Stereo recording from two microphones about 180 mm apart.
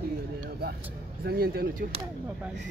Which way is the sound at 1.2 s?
60° right (ahead or behind).